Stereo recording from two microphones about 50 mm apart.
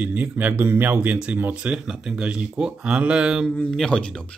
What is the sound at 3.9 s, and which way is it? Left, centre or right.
Speech, centre.